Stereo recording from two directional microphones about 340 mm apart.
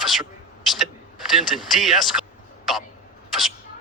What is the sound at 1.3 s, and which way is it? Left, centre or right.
Speech, centre.